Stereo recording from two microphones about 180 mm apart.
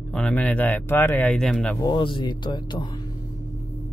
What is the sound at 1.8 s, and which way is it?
Speech, 25° left (ahead or behind).